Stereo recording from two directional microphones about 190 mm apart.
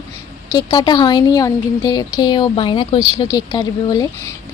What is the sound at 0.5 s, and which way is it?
A woman's voice, 20° left (ahead or behind).